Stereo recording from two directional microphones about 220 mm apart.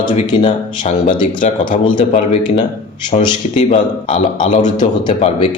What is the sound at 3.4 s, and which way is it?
Speech, 30° left (ahead or behind).